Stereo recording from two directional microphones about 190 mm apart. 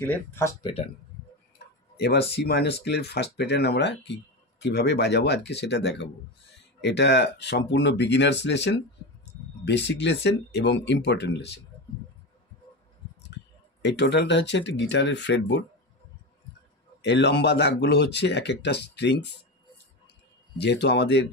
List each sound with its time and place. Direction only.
0.0 s speech: 10° left (ahead or behind)
2.0 s speech: 60° left (ahead or behind)
13.8 s speech: 65° left (ahead or behind)
17.0 s speech: 65° left (ahead or behind)
20.5 s speech: 65° left (ahead or behind)